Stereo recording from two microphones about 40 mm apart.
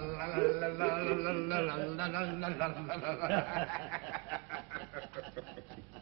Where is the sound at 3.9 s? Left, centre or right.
Centre.